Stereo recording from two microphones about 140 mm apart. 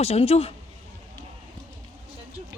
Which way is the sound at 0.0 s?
45° left (ahead or behind).